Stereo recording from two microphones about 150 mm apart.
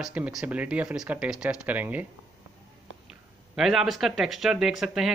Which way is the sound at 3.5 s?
5° right (ahead or behind).